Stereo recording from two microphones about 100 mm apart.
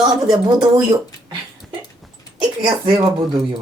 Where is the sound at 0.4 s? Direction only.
50° right (ahead or behind).